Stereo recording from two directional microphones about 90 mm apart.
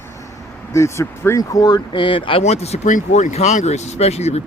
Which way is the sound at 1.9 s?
70° left (ahead or behind).